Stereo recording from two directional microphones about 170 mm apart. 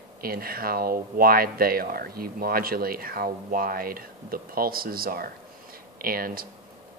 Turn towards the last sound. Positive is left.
turn(degrees=-60)  # may be behind; listen again after turning